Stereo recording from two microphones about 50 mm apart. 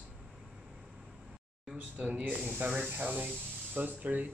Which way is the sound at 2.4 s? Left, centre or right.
Right.